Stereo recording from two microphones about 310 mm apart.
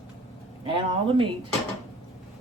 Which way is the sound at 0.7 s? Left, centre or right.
Centre.